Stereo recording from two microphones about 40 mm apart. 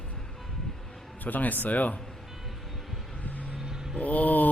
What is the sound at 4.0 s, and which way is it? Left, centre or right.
Speech, left.